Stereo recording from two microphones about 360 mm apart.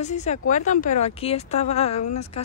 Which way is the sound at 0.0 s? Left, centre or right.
Centre.